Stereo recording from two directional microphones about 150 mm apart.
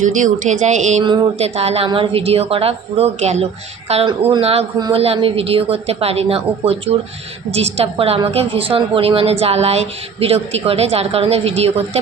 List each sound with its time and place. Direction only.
0.0 s speech: 55° right (ahead or behind)
1.0 s a sound: 30° right (ahead or behind)
1.4 s a woman's voice: 45° right (ahead or behind)